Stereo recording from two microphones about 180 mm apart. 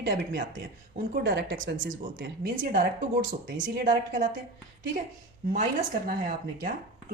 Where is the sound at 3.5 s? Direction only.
90° right.